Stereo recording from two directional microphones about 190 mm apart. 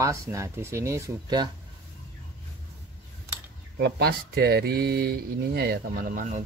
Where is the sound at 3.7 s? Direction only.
65° right (ahead or behind).